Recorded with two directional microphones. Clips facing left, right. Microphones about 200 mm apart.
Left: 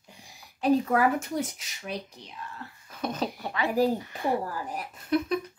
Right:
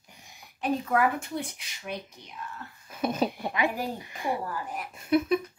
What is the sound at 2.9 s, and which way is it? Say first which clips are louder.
Speech: right 3 dB; 10° right (ahead or behind).